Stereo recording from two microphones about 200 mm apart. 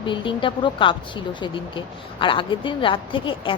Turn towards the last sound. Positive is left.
turn(degrees=25)  # may be behind; listen again after turning